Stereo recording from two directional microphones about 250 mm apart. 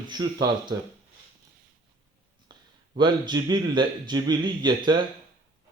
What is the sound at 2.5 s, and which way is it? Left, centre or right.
Speech, centre.